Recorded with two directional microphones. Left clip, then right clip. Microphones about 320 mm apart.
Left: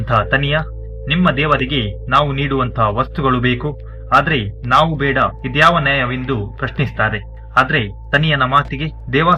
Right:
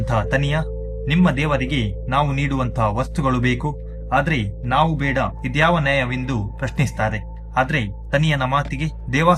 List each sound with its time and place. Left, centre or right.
0.1 s speech: centre